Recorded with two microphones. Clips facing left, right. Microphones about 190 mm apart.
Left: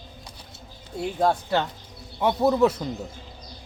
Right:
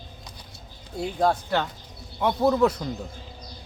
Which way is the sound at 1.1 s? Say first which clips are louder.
Left 1 dB; 5° left (ahead or behind).